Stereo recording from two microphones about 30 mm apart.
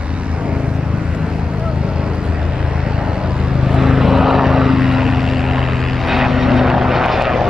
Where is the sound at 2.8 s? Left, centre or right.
Right.